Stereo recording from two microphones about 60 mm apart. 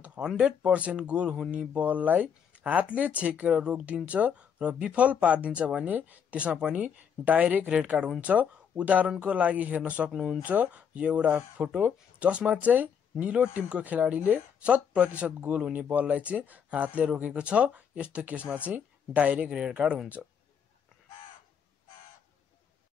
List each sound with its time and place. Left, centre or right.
0.2 s speech: centre
0.5 s speech: centre
10.1 s speech: centre
10.4 s speech: right